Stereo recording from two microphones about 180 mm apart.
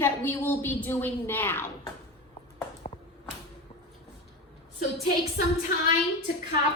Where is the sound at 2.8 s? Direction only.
45° left (ahead or behind).